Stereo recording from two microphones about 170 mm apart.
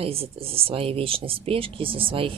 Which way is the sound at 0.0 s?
35° right (ahead or behind).